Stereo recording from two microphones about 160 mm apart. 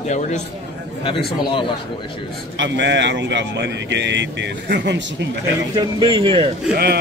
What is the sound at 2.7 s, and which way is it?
Speech, 90° right.